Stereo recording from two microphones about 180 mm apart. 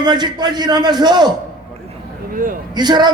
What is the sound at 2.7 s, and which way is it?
Speech, 25° right (ahead or behind).